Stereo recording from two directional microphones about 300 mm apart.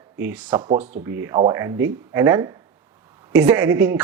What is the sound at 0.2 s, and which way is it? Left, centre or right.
Speech, centre.